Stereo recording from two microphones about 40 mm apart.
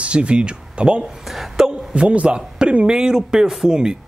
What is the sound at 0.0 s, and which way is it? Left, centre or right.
Speech, right.